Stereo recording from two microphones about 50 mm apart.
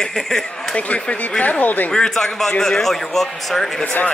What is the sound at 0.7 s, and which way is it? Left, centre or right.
Speech, left.